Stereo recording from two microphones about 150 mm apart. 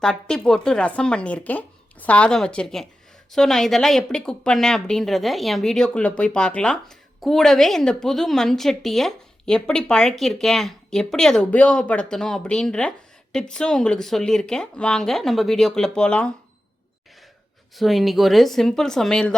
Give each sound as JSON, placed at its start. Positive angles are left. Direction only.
{"t": 0.0, "sound": "speech", "side_deg": 5}
{"t": 17.7, "sound": "speech", "side_deg": 0}